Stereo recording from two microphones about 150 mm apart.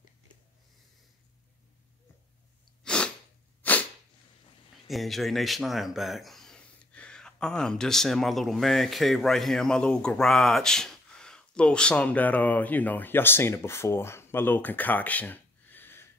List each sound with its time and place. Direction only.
2.8 s sneeze: 5° left (ahead or behind)
4.8 s speech: centre (ahead or behind)